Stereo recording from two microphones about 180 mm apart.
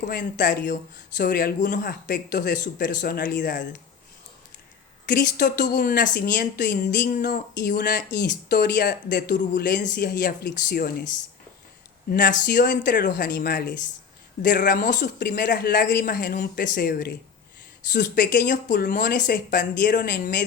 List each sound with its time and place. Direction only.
0.0 s speech: 50° left (ahead or behind)
5.0 s speech: 50° left (ahead or behind)
12.1 s speech: 50° left (ahead or behind)